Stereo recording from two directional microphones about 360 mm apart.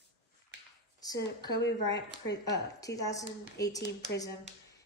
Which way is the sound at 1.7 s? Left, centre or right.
Left.